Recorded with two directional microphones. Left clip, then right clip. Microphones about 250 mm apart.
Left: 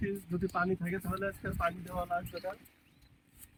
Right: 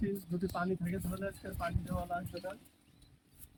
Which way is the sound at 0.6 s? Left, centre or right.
Centre.